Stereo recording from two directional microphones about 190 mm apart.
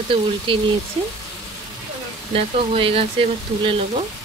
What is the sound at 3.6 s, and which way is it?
Frying, 30° right (ahead or behind).